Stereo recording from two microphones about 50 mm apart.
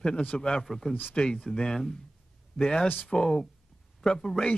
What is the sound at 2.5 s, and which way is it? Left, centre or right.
Speech, left.